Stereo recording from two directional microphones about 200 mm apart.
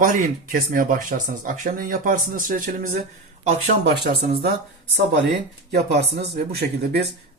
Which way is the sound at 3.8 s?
50° right (ahead or behind).